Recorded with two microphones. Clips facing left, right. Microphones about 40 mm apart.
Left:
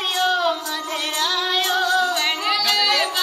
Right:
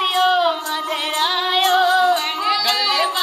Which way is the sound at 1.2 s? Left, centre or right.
Right.